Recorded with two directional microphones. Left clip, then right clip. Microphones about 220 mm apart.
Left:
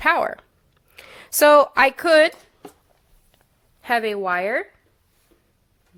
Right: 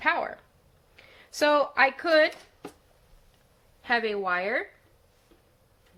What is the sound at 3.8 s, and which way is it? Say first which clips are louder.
Speech: left 5 dB; 45° left (ahead or behind).